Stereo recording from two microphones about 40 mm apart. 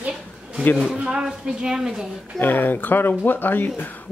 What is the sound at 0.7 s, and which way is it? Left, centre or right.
A woman's voice, centre.